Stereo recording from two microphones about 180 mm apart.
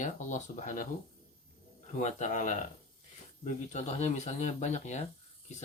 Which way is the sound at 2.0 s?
40° left (ahead or behind).